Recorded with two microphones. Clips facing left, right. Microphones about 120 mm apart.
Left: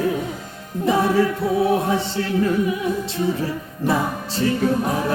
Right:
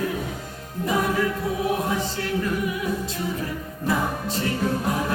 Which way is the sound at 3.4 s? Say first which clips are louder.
Left 5 dB; 30° left (ahead or behind).